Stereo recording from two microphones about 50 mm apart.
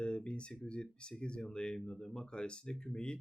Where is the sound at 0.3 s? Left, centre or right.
Left.